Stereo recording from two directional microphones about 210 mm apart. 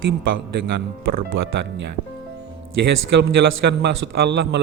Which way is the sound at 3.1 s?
55° right (ahead or behind).